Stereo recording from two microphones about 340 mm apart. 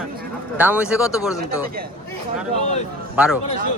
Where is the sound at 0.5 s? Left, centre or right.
Centre.